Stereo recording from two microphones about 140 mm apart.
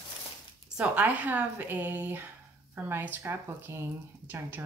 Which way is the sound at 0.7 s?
10° right (ahead or behind).